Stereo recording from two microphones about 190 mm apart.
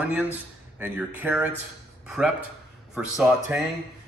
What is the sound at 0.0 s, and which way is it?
A man's voice, 5° right (ahead or behind).